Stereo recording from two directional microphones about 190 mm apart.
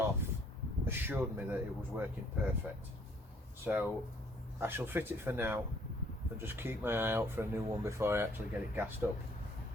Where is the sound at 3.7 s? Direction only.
5° right (ahead or behind).